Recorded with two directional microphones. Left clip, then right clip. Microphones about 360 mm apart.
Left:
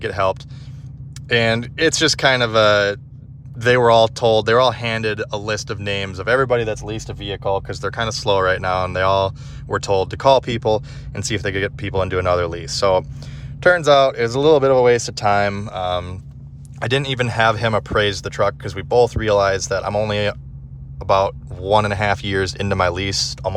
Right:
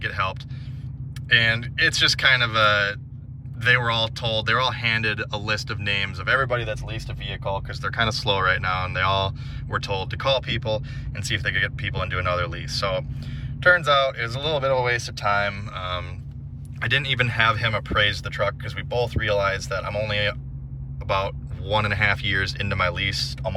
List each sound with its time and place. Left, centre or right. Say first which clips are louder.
0.0 s speech: left 7 dB; centre